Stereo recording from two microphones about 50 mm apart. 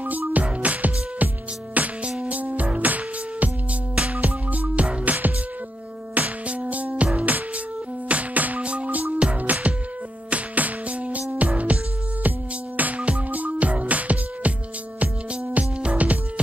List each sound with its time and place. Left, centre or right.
0.0 s music: right
15.5 s music: right